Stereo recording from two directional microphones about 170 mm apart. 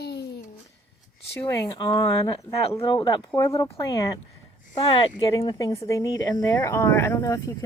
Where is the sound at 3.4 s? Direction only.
20° left (ahead or behind).